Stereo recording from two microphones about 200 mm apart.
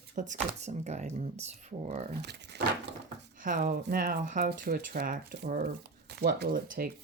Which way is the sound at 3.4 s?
45° right (ahead or behind).